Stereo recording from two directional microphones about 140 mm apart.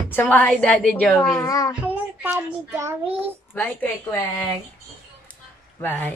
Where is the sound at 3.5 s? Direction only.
15° left (ahead or behind).